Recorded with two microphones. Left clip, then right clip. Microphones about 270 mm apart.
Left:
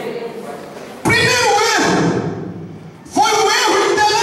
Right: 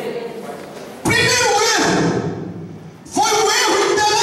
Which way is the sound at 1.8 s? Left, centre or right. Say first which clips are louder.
Left 1 dB; centre.